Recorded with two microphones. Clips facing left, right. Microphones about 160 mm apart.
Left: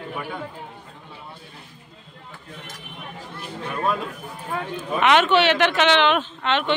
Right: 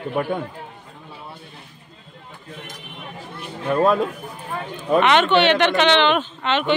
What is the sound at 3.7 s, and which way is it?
Speech, 60° right (ahead or behind).